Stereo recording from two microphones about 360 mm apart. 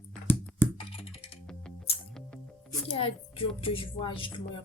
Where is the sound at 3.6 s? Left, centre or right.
Centre.